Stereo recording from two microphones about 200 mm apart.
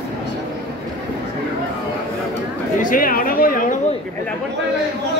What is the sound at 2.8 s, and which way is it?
Chatter, 45° left (ahead or behind).